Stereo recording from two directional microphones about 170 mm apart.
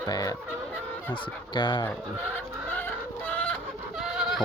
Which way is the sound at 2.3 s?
10° left (ahead or behind).